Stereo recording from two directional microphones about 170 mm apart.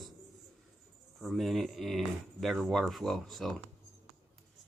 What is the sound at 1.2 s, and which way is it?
Speech, centre (ahead or behind).